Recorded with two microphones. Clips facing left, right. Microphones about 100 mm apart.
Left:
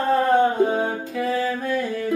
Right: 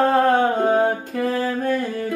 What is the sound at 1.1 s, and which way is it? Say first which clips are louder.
Music: right 1 dB; 45° right (ahead or behind).